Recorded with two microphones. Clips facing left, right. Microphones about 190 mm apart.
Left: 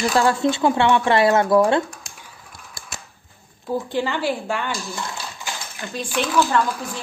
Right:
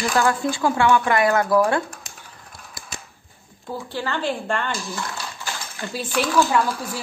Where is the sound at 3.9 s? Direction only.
15° left (ahead or behind).